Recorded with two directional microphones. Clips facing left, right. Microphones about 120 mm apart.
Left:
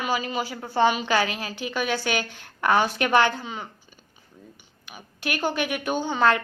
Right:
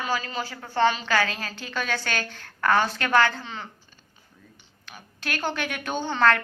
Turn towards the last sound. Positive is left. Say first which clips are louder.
# left 1 dB
turn(degrees=15)  # may be behind; listen again after turning